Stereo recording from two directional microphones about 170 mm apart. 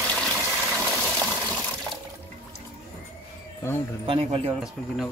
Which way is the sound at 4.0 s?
30° right (ahead or behind).